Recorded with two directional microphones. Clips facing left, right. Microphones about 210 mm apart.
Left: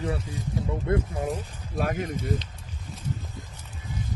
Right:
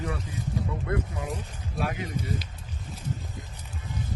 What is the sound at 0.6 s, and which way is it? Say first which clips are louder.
Speech: left 4 dB; 25° left (ahead or behind).